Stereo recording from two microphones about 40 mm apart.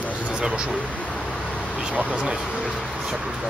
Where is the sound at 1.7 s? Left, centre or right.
Right.